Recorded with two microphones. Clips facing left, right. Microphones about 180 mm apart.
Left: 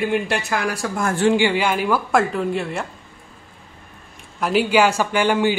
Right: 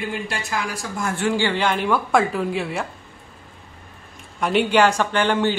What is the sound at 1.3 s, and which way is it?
Speech, 10° left (ahead or behind).